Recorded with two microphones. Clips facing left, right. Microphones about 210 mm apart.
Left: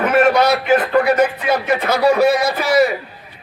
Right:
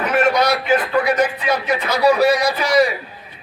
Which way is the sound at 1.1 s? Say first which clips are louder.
Left 3 dB; 50° left (ahead or behind).